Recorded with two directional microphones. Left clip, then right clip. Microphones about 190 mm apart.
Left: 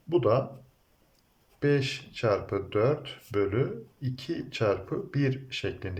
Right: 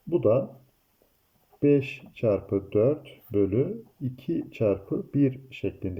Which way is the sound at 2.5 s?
Centre (ahead or behind).